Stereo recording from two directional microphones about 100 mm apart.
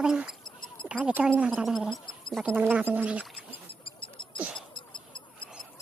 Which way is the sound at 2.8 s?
15° right (ahead or behind).